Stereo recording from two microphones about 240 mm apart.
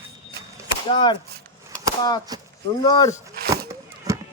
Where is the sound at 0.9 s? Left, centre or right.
Centre.